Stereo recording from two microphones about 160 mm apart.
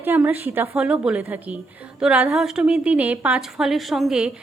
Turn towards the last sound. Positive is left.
turn(degrees=-5)  # may be behind; listen again after turning